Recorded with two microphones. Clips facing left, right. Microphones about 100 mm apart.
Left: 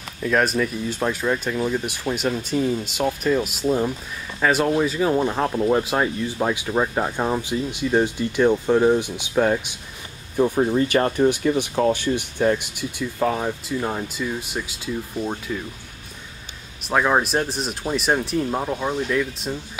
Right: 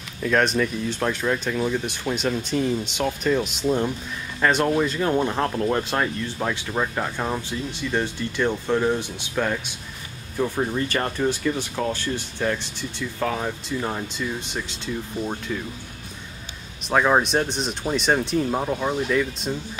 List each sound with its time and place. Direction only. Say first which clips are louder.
0.2 s speech: even; 5° left (ahead or behind)
16.8 s speech: even; centre (ahead or behind)